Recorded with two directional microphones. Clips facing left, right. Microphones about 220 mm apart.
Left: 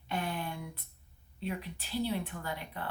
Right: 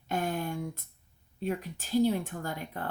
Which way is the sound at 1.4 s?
45° right (ahead or behind).